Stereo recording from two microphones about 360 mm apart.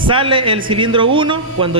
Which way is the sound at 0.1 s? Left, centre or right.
Centre.